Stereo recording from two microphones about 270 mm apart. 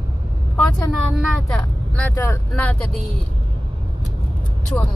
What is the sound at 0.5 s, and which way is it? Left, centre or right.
Speech, centre.